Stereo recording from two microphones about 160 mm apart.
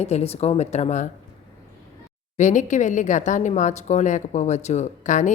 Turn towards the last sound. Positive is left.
turn(degrees=50)  # may be behind; listen again after turning